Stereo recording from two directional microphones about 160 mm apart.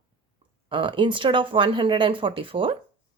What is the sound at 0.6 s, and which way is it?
Speech, 30° right (ahead or behind).